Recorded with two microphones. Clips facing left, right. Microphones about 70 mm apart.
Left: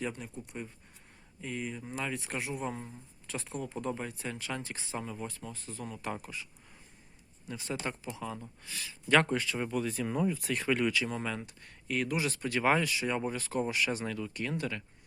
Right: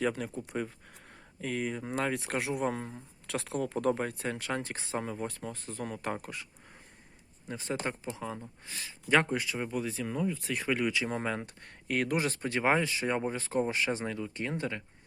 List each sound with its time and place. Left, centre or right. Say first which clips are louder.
0.2 s speech: right 7 dB; right
1.4 s speech: right 4 dB; right
2.0 s speech: right 4 dB; right
7.4 s speech: right 2 dB; right
9.3 s speech: left 1 dB; centre
10.1 s speech: left 1 dB; centre
10.6 s speech: even; centre
11.1 s speech: right 3 dB; right